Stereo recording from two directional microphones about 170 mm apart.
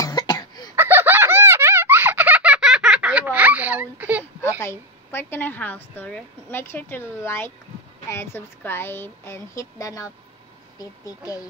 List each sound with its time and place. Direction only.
0.0 s cough: 20° left (ahead or behind)
0.7 s a sound: 10° right (ahead or behind)
4.6 s a woman's voice: 15° left (ahead or behind)